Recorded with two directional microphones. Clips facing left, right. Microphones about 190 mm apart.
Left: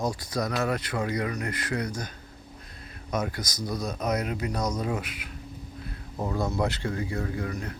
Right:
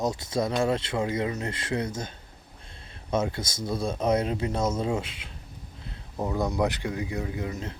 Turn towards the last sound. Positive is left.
turn(degrees=-20)  # may be behind; listen again after turning